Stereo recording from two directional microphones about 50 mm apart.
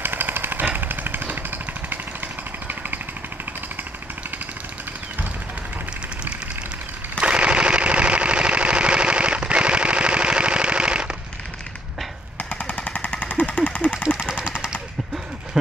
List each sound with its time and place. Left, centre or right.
0.0 s chainsaw: right
2.7 s jackhammer: right
7.2 s a sound: right
12.4 s machine gun: left
14.2 s vehicle: centre
15.5 s vehicle: centre